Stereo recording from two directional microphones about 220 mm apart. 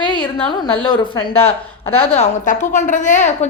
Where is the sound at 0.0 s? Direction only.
20° left (ahead or behind).